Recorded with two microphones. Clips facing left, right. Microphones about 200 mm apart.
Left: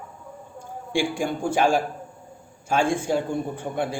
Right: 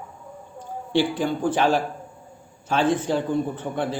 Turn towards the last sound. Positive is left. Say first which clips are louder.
# right 1 dB
turn(degrees=10)  # may be behind; listen again after turning